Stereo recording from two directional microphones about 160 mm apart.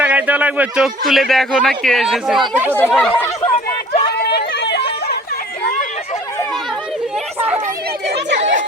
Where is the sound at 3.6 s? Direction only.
65° left (ahead or behind).